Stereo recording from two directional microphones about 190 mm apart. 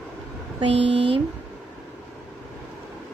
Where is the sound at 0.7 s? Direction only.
65° right (ahead or behind).